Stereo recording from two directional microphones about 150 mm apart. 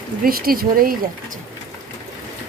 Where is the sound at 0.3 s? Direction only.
80° right.